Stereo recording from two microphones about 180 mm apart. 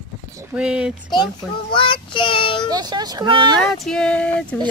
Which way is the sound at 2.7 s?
20° right (ahead or behind).